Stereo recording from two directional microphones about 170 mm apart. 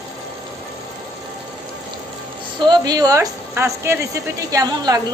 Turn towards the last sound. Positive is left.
turn(degrees=-25)  # may be behind; listen again after turning